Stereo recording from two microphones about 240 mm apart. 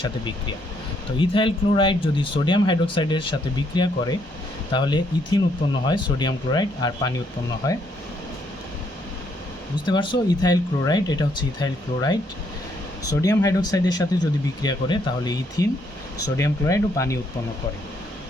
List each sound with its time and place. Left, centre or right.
1.2 s speech: left
9.8 s speech: centre